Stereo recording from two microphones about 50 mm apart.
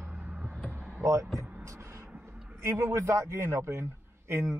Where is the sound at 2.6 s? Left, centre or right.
Right.